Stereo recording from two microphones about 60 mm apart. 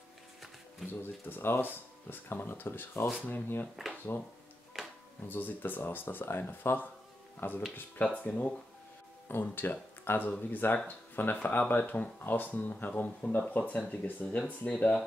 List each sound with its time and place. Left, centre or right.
1.0 s speech: left
4.7 s music: centre
5.3 s speech: left
8.2 s speech: left
9.3 s speech: left